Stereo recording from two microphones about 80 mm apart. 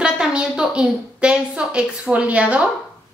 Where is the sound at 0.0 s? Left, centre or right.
Centre.